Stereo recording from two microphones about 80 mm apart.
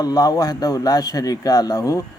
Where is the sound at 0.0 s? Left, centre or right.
Left.